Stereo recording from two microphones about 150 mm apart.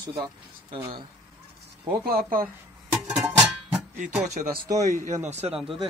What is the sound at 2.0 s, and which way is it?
Speech, 75° right (ahead or behind).